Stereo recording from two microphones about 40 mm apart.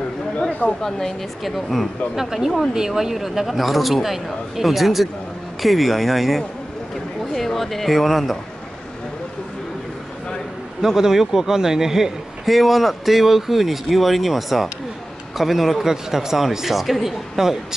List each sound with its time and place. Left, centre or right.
0.4 s a sound: left
0.7 s speech: centre
1.4 s speech: centre
10.8 s speech: centre
12.4 s speech: centre